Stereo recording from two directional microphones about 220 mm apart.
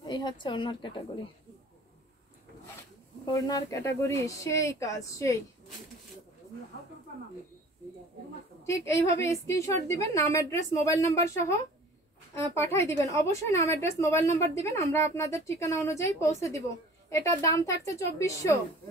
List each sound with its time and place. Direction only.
0.0 s a woman's voice: 20° left (ahead or behind)
3.3 s a woman's voice: 15° left (ahead or behind)
8.6 s a woman's voice: 15° left (ahead or behind)
13.1 s a woman's voice: 15° left (ahead or behind)